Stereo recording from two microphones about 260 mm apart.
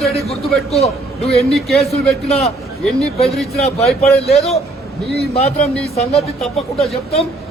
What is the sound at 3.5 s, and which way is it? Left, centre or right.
Speech, left.